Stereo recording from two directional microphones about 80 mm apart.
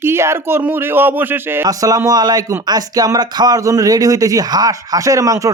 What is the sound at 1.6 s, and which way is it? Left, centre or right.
Speech, right.